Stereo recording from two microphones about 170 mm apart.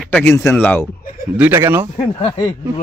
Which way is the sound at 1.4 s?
15° right (ahead or behind).